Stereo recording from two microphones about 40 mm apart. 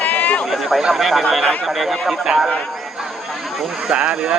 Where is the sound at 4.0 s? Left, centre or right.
Right.